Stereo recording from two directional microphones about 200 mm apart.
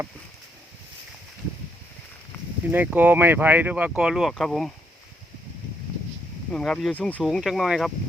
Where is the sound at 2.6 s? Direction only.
10° right (ahead or behind).